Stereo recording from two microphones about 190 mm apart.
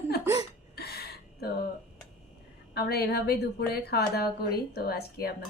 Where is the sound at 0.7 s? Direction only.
55° left (ahead or behind).